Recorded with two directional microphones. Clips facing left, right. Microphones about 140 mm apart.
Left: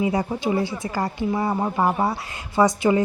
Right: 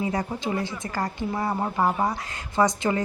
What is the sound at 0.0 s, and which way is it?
A woman's voice, 10° left (ahead or behind).